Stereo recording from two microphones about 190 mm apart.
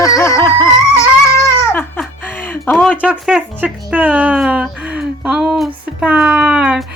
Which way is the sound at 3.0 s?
5° right (ahead or behind).